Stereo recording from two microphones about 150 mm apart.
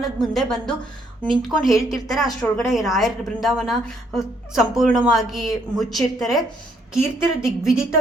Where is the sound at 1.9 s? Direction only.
Centre (ahead or behind).